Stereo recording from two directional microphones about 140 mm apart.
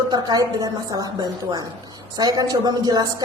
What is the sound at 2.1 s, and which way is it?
A woman's voice, 30° right (ahead or behind).